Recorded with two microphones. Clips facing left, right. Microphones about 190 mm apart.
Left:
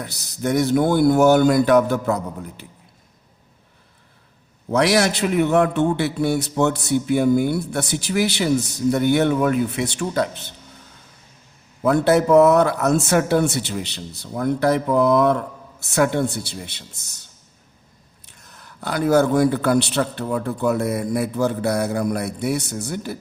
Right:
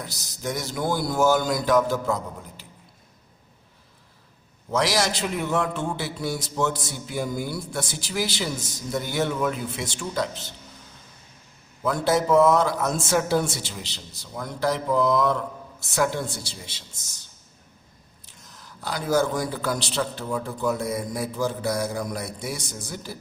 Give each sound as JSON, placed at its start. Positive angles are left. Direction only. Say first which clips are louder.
{"t": 0.0, "sound": "a man's voice", "louder": "left 7 dB", "side_deg": 60}
{"t": 4.7, "sound": "a man's voice", "louder": "left 6 dB", "side_deg": 60}
{"t": 11.9, "sound": "a man's voice", "louder": "left 6 dB", "side_deg": 60}
{"t": 18.3, "sound": "a man's voice", "louder": "left 4 dB", "side_deg": 60}